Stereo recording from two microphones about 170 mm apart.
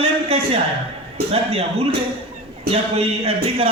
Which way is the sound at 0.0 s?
35° right (ahead or behind).